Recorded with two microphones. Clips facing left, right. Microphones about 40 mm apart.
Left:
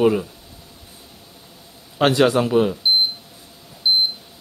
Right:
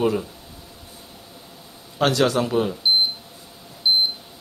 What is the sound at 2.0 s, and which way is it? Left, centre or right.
Speech, left.